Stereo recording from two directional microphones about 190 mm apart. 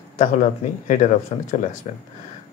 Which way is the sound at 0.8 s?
40° left (ahead or behind).